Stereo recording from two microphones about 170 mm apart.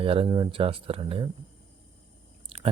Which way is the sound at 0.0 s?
35° right (ahead or behind).